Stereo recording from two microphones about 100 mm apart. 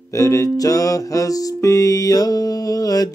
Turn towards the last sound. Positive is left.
turn(degrees=40)  # may be behind; listen again after turning